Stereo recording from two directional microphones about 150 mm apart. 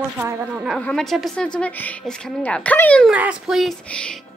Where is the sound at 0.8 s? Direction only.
5° left (ahead or behind).